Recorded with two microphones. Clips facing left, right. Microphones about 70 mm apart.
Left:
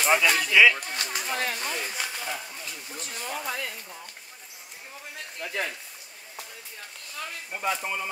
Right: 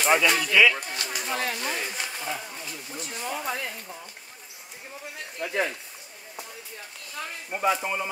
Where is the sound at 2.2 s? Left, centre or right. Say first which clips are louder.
Right 2 dB; centre.